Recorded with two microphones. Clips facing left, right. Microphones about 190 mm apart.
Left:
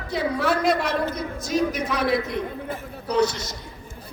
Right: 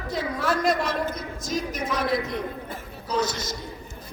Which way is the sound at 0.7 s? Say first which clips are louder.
Left 2 dB; 65° left (ahead or behind).